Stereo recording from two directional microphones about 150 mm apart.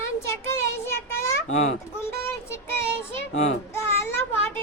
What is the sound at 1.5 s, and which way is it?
Speech, 50° left (ahead or behind).